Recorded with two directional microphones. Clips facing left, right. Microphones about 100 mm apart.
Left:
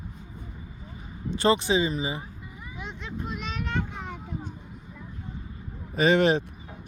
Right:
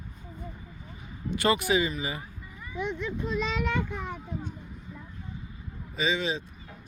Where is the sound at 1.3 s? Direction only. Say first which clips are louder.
Left 2 dB; 30° left (ahead or behind).